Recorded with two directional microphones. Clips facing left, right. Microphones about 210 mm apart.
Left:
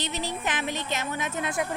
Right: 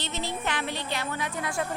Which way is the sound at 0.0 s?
15° left (ahead or behind).